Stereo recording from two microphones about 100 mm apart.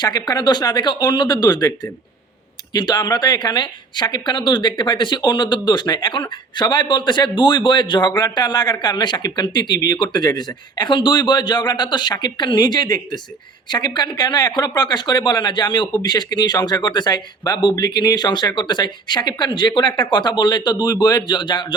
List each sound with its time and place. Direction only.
0.0 s speech: 45° left (ahead or behind)